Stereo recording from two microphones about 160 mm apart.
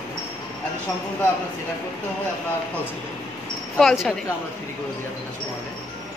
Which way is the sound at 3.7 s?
Centre (ahead or behind).